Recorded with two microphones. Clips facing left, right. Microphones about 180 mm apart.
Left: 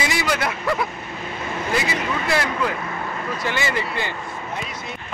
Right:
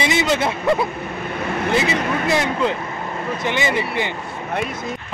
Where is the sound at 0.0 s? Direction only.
25° right (ahead or behind).